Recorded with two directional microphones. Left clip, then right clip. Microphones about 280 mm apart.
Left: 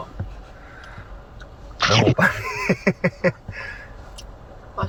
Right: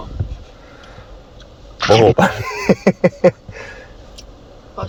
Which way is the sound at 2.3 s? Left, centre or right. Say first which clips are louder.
Right 6 dB; right.